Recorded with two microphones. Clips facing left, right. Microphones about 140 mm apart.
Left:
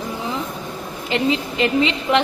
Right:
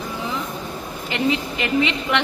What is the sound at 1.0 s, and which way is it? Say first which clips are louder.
A woman's voice: left 2 dB; 30° left (ahead or behind).